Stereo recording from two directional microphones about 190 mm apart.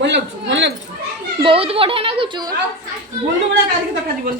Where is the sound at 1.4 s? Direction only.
30° right (ahead or behind).